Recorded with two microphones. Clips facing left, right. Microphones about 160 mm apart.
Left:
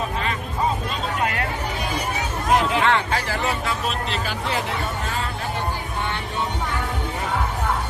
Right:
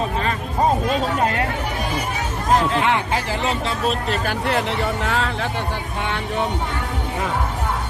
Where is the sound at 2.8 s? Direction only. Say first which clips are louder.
Even; 15° right (ahead or behind).